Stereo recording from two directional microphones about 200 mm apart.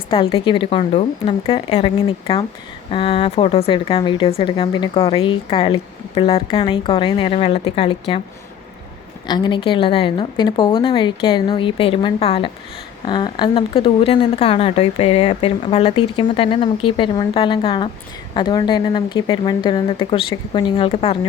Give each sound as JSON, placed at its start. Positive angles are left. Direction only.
{"t": 0.1, "sound": "speech", "side_deg": 25}
{"t": 9.2, "sound": "speech", "side_deg": 20}